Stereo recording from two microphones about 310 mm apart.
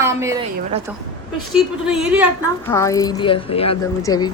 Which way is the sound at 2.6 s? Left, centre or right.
Centre.